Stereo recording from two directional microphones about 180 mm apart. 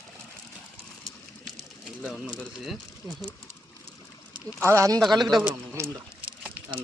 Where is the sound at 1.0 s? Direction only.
Centre (ahead or behind).